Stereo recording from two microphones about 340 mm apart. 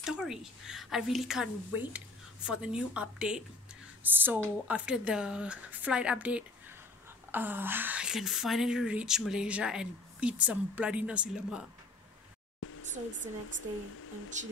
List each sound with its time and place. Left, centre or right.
0.0 s speech: centre
12.6 s a sound: left
14.3 s speech: right